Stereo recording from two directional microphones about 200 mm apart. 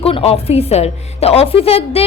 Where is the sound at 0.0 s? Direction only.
30° left (ahead or behind).